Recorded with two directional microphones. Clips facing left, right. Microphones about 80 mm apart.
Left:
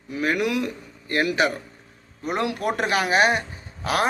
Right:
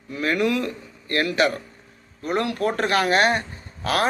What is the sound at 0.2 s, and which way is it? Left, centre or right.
A man's voice, centre.